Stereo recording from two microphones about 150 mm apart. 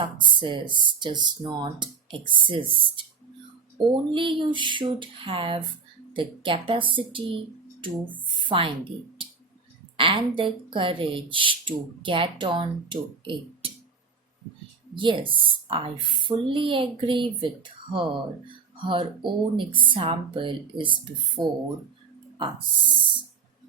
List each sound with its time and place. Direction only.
0.0 s speech: 35° right (ahead or behind)
8.4 s speech: 35° right (ahead or behind)
14.9 s speech: 35° right (ahead or behind)